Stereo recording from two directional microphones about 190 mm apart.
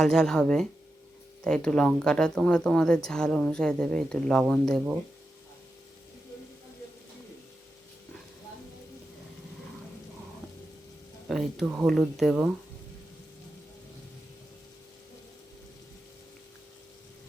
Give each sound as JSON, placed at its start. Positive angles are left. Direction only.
{"t": 0.0, "sound": "speech", "side_deg": 5}
{"t": 11.3, "sound": "speech", "side_deg": 0}